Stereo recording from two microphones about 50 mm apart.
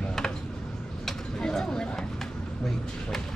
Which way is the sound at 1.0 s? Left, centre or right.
Centre.